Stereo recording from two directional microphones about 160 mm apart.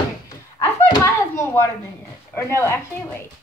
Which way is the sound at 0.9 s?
20° left (ahead or behind).